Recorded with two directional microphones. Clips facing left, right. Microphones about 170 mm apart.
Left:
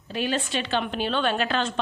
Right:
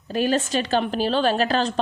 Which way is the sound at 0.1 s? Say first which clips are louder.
Right 5 dB; 45° right (ahead or behind).